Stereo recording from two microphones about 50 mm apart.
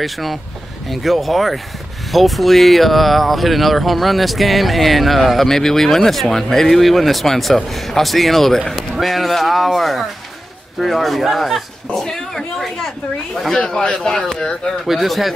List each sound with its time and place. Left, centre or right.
0.0 s speech: centre
14.9 s speech: centre